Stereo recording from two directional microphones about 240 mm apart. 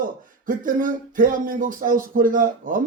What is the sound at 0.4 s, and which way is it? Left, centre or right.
Speech, right.